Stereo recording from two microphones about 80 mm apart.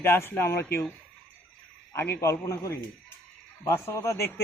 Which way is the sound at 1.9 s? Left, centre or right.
Left.